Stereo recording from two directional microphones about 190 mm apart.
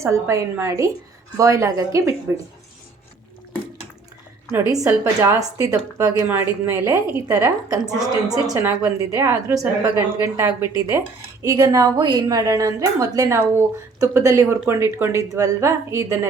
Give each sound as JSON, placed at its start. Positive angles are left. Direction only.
{"t": 0.0, "sound": "a woman's voice", "side_deg": -15}
{"t": 4.5, "sound": "a woman's voice", "side_deg": -15}